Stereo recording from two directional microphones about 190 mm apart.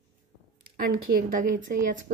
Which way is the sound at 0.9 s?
45° right (ahead or behind).